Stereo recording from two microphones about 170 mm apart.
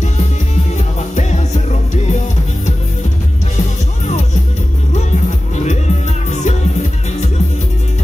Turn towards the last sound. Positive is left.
turn(degrees=45)  # may be behind; listen again after turning